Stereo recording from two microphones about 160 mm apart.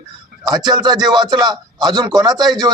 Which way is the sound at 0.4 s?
25° right (ahead or behind).